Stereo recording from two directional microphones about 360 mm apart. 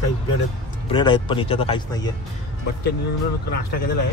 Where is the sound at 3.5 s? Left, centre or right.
Left.